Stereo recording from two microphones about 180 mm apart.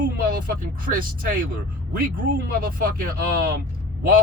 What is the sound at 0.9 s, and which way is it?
Speech, 50° right (ahead or behind).